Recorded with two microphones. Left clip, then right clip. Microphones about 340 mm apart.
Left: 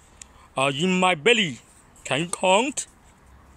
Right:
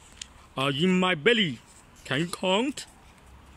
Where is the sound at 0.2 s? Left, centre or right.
Centre.